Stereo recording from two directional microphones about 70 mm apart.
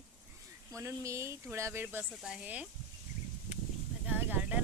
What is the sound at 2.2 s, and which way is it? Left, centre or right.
Speech, centre.